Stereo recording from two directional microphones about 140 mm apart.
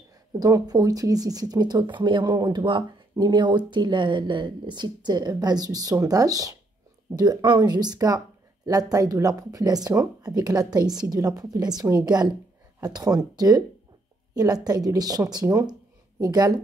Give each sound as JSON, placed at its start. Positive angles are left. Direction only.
{"t": 0.4, "sound": "speech", "side_deg": -25}